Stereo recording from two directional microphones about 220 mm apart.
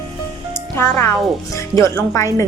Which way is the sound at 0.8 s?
10° left (ahead or behind).